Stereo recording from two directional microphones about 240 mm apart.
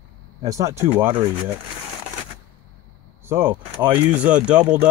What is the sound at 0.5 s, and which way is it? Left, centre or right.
Speech, centre.